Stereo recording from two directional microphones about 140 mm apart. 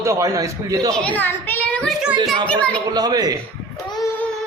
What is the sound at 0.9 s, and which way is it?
A child's voice, 10° left (ahead or behind).